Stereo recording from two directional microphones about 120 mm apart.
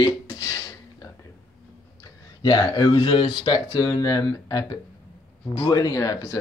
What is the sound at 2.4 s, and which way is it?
Speech, 30° left (ahead or behind).